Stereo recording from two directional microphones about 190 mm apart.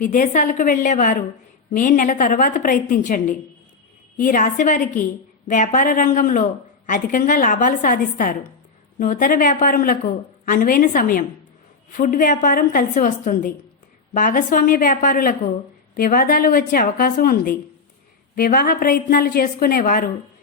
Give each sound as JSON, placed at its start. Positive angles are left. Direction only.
{"t": 0.0, "sound": "speech", "side_deg": 45}